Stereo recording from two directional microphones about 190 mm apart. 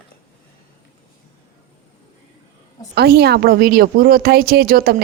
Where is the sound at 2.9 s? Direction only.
60° right (ahead or behind).